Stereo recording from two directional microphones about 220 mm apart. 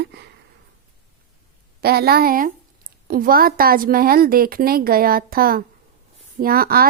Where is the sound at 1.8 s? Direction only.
45° right (ahead or behind).